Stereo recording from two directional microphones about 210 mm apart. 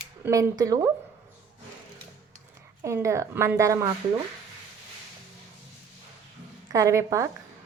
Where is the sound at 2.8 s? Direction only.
15° right (ahead or behind).